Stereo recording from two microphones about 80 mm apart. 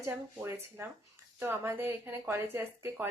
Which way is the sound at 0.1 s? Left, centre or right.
Right.